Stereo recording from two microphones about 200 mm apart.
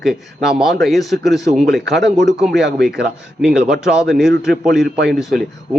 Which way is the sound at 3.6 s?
5° right (ahead or behind).